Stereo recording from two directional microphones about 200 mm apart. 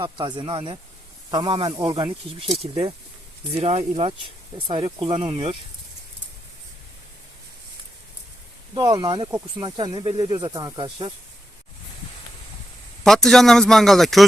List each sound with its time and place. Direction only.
0.0 s speech: 25° right (ahead or behind)
8.7 s speech: 20° right (ahead or behind)
13.1 s speech: centre (ahead or behind)